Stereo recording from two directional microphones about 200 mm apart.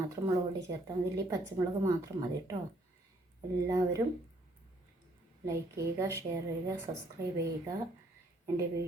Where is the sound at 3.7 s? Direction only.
15° right (ahead or behind).